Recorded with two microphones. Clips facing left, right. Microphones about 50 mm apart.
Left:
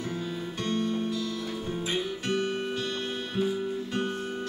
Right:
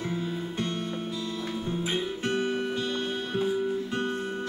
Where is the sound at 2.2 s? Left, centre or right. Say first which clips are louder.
Right 1 dB; right.